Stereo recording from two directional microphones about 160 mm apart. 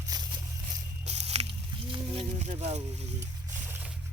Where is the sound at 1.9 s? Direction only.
35° right (ahead or behind).